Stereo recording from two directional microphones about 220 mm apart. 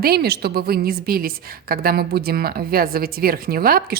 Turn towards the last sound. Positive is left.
turn(degrees=-40)  # may be behind; listen again after turning